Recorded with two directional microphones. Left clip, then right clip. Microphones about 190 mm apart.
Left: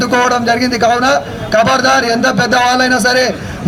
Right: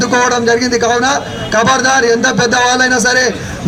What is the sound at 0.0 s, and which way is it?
A man's voice, 30° left (ahead or behind).